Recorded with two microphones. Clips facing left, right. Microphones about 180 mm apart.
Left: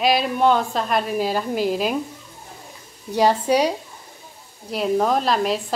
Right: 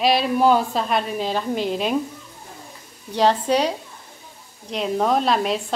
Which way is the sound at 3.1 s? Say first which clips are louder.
Left 1 dB; 10° left (ahead or behind).